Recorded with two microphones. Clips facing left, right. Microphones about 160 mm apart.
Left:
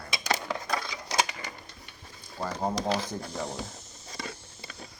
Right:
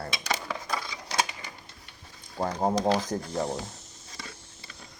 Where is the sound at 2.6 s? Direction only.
25° right (ahead or behind).